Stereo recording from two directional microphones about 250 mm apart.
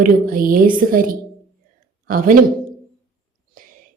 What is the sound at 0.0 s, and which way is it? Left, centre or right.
A woman's voice, right.